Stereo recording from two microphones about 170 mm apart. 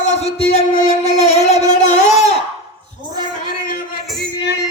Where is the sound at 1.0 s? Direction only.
40° left (ahead or behind).